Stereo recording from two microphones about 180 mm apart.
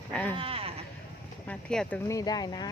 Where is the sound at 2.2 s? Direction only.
20° left (ahead or behind).